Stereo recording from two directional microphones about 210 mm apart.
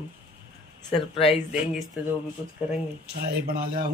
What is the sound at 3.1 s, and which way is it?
Speech, 50° right (ahead or behind).